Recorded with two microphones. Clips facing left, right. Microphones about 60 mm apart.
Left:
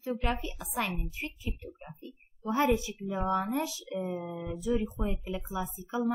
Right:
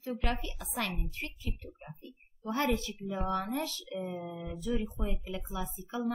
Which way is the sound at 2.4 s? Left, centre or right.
Centre.